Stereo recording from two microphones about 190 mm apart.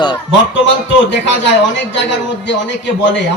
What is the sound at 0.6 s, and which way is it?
A man's voice, 70° left (ahead or behind).